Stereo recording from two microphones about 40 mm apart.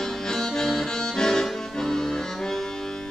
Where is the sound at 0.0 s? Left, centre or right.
Centre.